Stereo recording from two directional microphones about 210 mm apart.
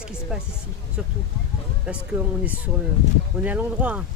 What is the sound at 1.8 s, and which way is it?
Speech, 5° right (ahead or behind).